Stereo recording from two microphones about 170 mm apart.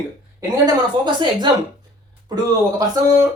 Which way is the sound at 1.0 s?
25° right (ahead or behind).